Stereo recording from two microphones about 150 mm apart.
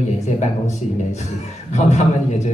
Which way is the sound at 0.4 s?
50° left (ahead or behind).